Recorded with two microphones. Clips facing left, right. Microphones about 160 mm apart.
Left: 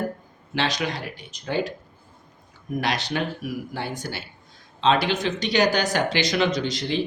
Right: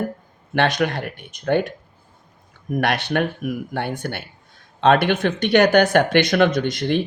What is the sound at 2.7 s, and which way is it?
Speech, 60° right (ahead or behind).